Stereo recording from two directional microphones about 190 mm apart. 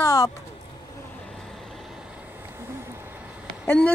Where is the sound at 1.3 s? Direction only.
Centre (ahead or behind).